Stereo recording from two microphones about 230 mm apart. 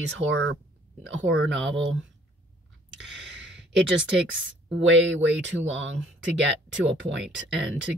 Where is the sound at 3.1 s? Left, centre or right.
Right.